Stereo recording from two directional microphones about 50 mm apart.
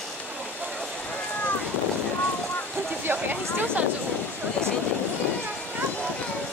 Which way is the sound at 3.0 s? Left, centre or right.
Right.